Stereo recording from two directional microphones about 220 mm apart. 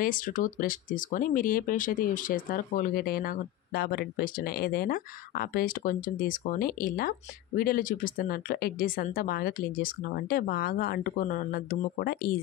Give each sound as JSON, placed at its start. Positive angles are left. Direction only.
{"t": 0.0, "sound": "speech", "side_deg": 40}